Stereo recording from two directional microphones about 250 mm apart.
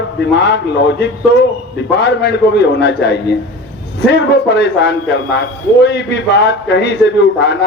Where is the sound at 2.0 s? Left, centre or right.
Left.